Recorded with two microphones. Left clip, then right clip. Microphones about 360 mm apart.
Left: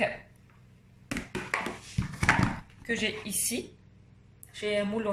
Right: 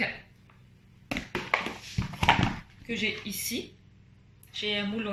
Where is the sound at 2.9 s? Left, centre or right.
Left.